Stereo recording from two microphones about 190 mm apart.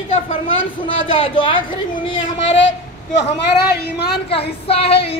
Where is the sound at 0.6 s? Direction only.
90° left.